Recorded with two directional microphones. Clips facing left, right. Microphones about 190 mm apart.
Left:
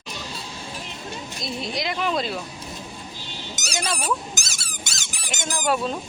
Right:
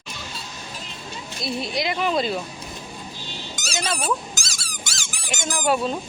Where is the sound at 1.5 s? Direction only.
Centre (ahead or behind).